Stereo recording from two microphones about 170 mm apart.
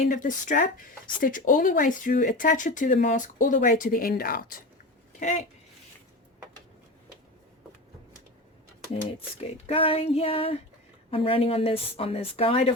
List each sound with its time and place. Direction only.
0.1 s speech: 50° left (ahead or behind)
5.2 s speech: 45° left (ahead or behind)
9.4 s speech: 35° left (ahead or behind)